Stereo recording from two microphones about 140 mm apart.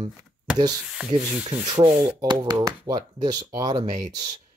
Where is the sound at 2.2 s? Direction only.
30° right (ahead or behind).